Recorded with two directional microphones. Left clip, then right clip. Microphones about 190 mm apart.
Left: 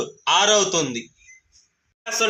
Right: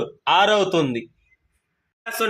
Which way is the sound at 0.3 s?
55° right (ahead or behind).